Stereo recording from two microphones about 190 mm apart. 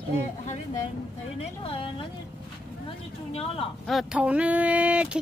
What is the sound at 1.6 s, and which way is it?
Speech, 30° left (ahead or behind).